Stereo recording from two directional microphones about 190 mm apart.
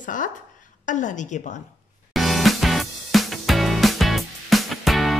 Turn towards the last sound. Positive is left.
turn(degrees=0)  # may be behind; listen again after turning